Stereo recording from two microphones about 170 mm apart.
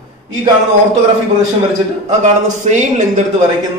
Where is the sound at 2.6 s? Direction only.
45° right (ahead or behind).